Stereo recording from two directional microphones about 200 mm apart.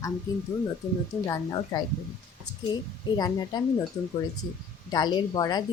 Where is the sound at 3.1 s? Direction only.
20° left (ahead or behind).